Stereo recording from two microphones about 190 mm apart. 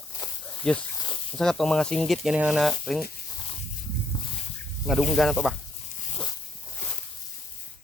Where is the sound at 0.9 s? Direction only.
25° left (ahead or behind).